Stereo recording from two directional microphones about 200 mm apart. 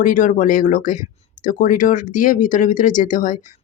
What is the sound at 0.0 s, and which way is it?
Speech, 40° left (ahead or behind).